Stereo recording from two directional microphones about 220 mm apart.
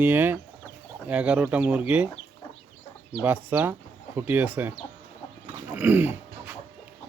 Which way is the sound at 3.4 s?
10° right (ahead or behind).